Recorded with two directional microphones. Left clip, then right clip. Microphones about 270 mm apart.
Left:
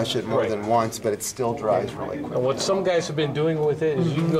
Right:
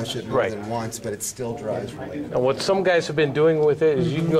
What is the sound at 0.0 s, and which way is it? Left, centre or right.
Speech, centre.